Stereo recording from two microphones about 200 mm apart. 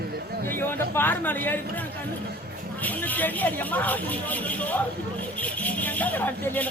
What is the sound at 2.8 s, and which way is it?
Speech, 10° left (ahead or behind).